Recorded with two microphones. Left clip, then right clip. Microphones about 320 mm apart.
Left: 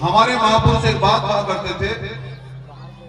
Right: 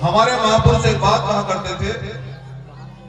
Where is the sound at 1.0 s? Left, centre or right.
Centre.